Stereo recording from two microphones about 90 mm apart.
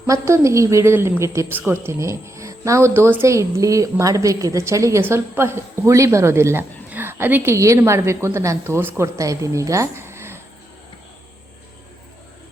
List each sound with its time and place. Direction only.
0.1 s speech: 35° right (ahead or behind)
7.5 s speech: 35° right (ahead or behind)
9.1 s a woman's voice: 35° right (ahead or behind)